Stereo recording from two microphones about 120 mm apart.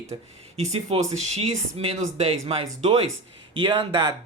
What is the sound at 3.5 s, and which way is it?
Speech, 45° right (ahead or behind).